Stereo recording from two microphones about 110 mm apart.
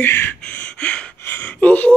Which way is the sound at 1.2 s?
20° left (ahead or behind).